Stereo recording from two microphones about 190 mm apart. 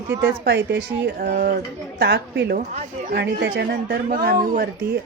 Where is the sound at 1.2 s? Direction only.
50° right (ahead or behind).